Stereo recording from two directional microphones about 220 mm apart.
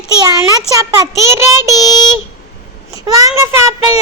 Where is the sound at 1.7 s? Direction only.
15° left (ahead or behind).